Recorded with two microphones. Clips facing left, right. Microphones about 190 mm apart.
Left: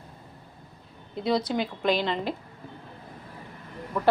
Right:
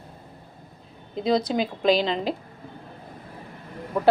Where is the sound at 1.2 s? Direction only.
90° right.